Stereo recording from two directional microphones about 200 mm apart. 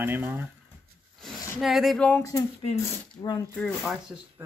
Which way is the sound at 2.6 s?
25° left (ahead or behind).